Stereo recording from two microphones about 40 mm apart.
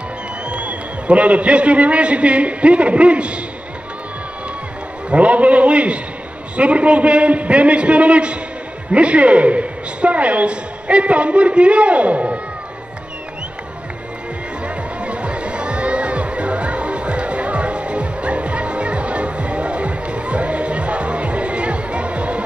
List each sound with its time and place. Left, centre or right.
0.5 s a man's voice: right
5.1 s a woman's voice: right
15.0 s music: right